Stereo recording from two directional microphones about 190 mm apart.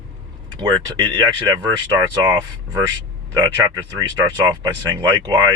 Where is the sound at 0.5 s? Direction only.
25° right (ahead or behind).